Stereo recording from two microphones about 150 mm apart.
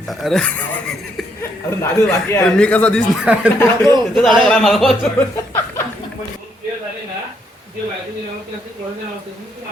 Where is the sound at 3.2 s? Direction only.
10° right (ahead or behind).